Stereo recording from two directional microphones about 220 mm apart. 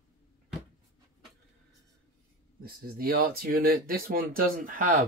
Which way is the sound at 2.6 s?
40° right (ahead or behind).